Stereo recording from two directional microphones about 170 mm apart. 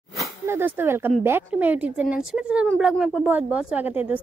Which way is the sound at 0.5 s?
10° right (ahead or behind).